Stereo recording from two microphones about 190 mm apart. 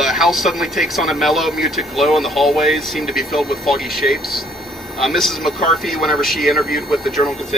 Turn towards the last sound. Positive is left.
turn(degrees=0)  # may be behind; listen again after turning